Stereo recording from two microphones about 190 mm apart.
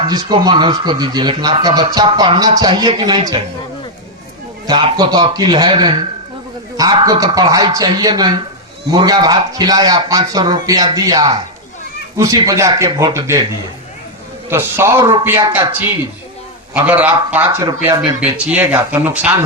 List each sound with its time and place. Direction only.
0.1 s speech: 20° right (ahead or behind)
4.6 s speech: 20° right (ahead or behind)
14.5 s speech: 15° right (ahead or behind)
16.7 s speech: 10° right (ahead or behind)
17.8 s speech: 25° right (ahead or behind)
18.2 s speech: 10° right (ahead or behind)